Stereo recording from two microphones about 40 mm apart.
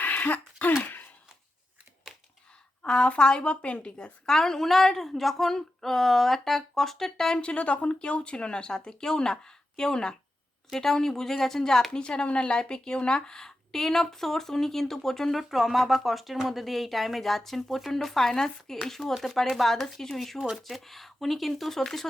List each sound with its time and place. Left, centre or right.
0.0 s throat clearing: left
0.8 s a sound: left
2.8 s speech: left
4.3 s speech: centre
7.3 s speech: left; by 11.9 s centre
11.9 s speech: left; by 15.4 s centre
15.4 s speech: centre